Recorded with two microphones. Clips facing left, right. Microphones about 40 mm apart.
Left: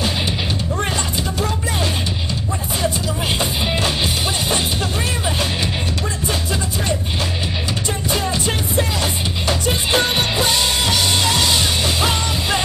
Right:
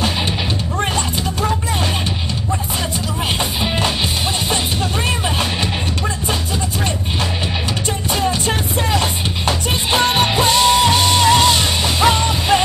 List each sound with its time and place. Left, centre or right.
8.3 s music: right